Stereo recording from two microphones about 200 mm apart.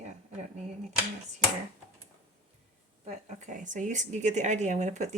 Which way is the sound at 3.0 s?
40° right (ahead or behind).